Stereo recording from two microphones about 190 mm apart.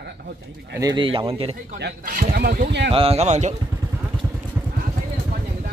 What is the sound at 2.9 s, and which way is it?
Speech, 30° right (ahead or behind).